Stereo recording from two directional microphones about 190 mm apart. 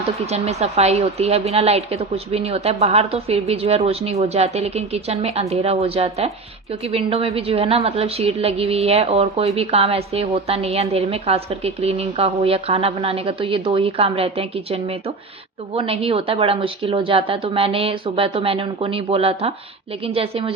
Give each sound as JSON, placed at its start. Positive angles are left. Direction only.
{"t": 0.3, "sound": "a woman's voice", "side_deg": -35}